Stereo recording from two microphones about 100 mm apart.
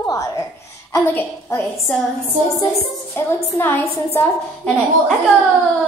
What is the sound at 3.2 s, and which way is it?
A woman's voice, 25° left (ahead or behind).